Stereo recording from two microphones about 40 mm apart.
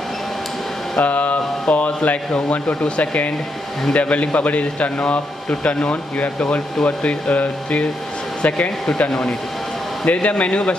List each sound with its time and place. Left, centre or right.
0.9 s a man's voice: left
8.6 s a man's voice: left
10.0 s a man's voice: left